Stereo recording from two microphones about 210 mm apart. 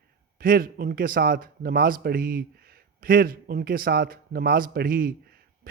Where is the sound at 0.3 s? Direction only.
45° right (ahead or behind).